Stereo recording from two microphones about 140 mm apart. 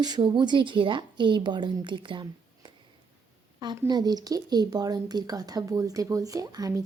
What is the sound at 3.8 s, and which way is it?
Speech, 30° right (ahead or behind).